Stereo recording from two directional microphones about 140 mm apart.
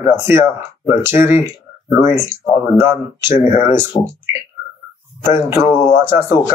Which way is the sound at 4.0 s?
25° left (ahead or behind).